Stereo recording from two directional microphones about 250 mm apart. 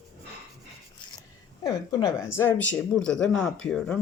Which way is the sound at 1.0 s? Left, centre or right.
Centre.